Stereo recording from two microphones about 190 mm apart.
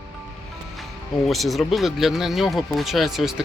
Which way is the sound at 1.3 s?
Centre (ahead or behind).